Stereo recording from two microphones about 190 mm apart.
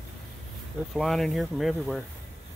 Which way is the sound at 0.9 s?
Centre (ahead or behind).